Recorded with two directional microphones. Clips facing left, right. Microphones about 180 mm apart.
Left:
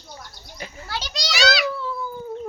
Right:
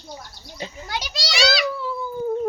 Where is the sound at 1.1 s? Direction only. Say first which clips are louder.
Even; centre (ahead or behind).